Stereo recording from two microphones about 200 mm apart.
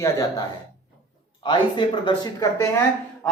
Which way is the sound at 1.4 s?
25° left (ahead or behind).